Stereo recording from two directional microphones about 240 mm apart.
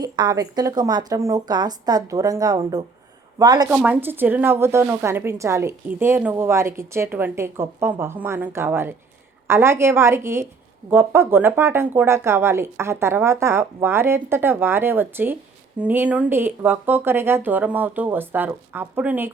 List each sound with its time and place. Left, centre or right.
0.0 s a woman's voice: centre
3.7 s a woman's voice: centre